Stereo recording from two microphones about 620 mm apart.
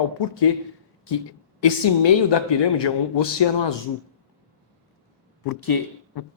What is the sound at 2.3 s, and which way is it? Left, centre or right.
Speech, left.